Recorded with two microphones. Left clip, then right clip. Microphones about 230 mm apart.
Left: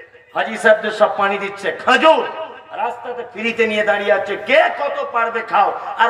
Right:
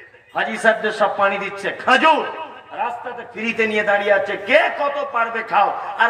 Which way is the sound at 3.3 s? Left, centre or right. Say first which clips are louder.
Left 2 dB; left.